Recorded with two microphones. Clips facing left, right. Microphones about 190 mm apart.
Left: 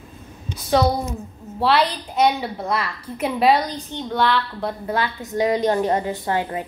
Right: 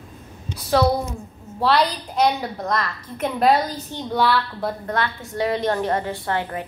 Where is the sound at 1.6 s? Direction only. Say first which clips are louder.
Even; 5° left (ahead or behind).